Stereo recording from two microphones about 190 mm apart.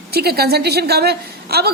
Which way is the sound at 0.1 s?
55° right (ahead or behind).